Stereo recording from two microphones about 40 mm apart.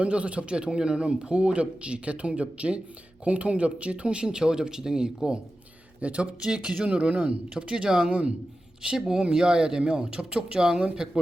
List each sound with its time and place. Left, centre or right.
0.0 s a man's voice: right
6.0 s speech: right
6.4 s a man's voice: centre